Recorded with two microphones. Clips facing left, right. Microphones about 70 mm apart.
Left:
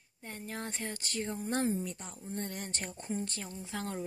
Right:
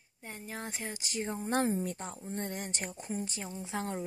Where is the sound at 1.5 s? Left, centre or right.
Right.